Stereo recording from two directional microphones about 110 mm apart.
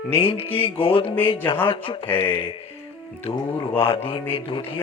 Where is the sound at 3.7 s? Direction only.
55° left (ahead or behind).